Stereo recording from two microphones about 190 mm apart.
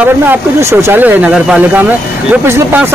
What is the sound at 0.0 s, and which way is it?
A man's voice, 10° right (ahead or behind).